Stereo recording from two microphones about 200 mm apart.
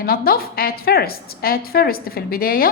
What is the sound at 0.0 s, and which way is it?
A woman's voice, 50° left (ahead or behind).